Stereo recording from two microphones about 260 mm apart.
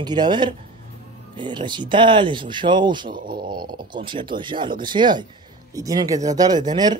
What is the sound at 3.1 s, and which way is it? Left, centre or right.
Speech, right.